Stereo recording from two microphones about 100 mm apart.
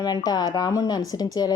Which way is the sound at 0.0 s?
40° left (ahead or behind).